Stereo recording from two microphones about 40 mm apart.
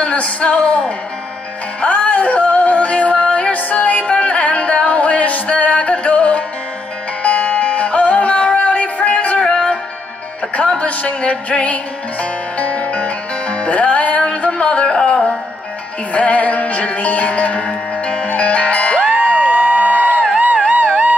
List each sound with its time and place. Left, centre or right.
0.0 s music: left
1.8 s yodeling: left
3.7 s music: left
9.4 s music: left
16.1 s music: left
19.5 s a sound: right
20.3 s music: right